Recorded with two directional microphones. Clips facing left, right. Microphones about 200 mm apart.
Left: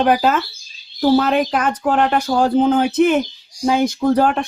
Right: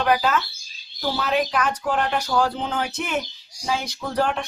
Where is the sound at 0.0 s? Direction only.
50° left (ahead or behind).